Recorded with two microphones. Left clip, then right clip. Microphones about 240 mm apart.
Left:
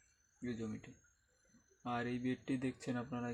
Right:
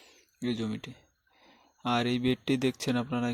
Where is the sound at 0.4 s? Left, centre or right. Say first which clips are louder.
Right 11 dB; right.